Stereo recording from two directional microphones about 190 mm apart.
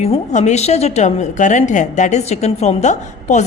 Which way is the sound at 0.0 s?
35° left (ahead or behind).